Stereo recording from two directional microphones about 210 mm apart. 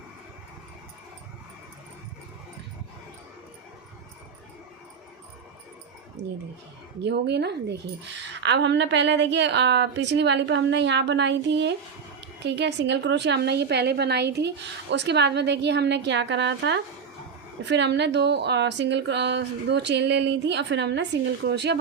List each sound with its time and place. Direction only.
7.0 s speech: 55° right (ahead or behind)